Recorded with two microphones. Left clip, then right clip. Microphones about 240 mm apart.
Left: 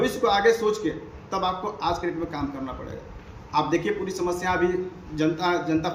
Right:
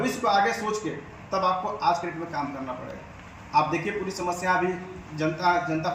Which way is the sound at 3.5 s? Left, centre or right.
Left.